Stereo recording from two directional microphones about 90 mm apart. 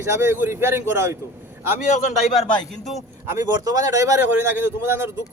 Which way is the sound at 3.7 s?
40° right (ahead or behind).